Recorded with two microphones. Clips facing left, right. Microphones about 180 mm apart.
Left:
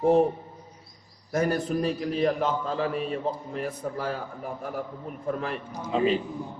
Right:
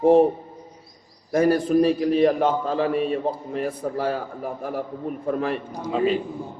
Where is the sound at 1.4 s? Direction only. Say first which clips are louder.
Right 7 dB; 30° right (ahead or behind).